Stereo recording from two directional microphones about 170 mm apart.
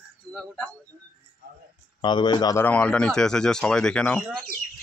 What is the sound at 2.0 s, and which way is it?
Speech, 25° left (ahead or behind).